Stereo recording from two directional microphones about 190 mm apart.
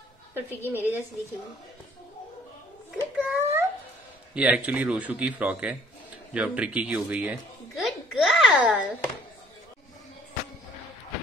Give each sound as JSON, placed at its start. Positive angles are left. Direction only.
{"t": 0.3, "sound": "a man's voice", "side_deg": -10}
{"t": 3.2, "sound": "a sound", "side_deg": -10}
{"t": 4.3, "sound": "a man's voice", "side_deg": -5}